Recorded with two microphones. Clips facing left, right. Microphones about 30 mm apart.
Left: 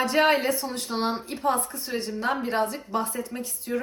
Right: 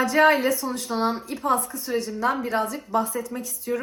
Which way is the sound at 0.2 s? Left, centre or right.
Left.